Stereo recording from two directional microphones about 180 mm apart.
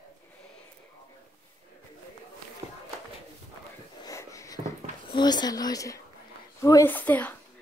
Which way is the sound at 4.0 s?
20° left (ahead or behind).